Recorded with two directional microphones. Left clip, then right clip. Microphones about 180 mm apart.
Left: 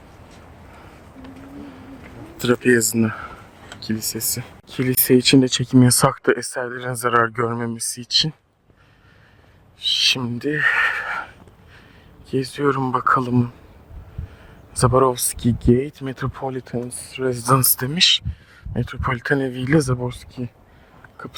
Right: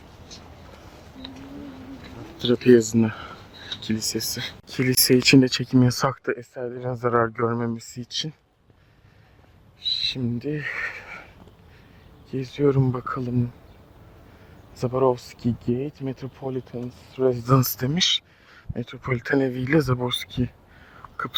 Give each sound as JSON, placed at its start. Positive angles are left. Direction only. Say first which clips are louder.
{"t": 2.4, "sound": "speech", "louder": "even", "side_deg": 20}
{"t": 6.3, "sound": "speech", "louder": "left 7 dB", "side_deg": 35}
{"t": 9.8, "sound": "owl", "louder": "left 7 dB", "side_deg": 35}
{"t": 12.3, "sound": "speech", "louder": "left 2 dB", "side_deg": 35}
{"t": 14.8, "sound": "speech", "louder": "left 5 dB", "side_deg": 40}
{"t": 17.5, "sound": "speech", "louder": "left 4 dB", "side_deg": 20}
{"t": 19.2, "sound": "speech", "louder": "right 1 dB", "side_deg": 15}
{"t": 20.0, "sound": "speech", "louder": "right 3 dB", "side_deg": -10}